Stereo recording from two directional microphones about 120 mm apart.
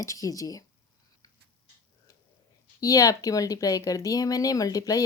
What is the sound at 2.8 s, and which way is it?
Speech, 30° left (ahead or behind).